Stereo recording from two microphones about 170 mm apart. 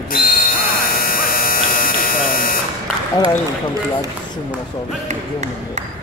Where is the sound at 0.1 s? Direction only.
55° left (ahead or behind).